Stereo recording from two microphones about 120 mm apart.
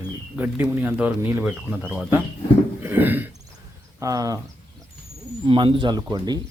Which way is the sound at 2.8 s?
15° right (ahead or behind).